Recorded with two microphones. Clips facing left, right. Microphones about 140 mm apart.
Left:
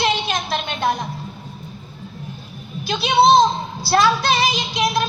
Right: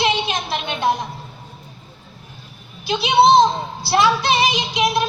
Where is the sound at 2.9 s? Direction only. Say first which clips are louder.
Right 1 dB; 20° right (ahead or behind).